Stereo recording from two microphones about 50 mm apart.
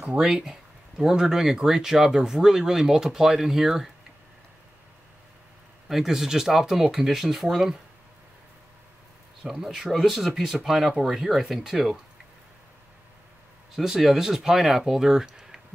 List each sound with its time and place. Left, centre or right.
0.0 s speech: centre
5.9 s speech: centre
9.4 s speech: centre
13.7 s speech: centre